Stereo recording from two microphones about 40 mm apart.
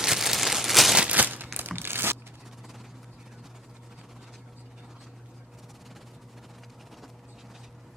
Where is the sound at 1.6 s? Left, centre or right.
Right.